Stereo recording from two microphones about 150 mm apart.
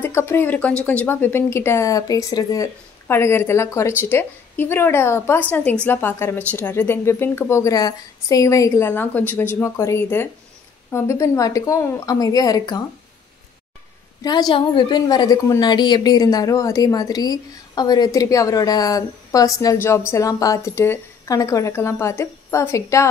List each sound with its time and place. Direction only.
0.0 s a woman's voice: 15° left (ahead or behind)
14.2 s a woman's voice: 30° left (ahead or behind)